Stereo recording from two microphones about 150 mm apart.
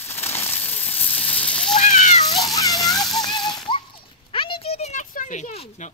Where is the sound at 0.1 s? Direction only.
15° left (ahead or behind).